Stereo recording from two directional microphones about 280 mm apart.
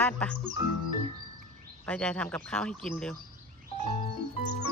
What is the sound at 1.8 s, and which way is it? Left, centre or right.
Speech, centre.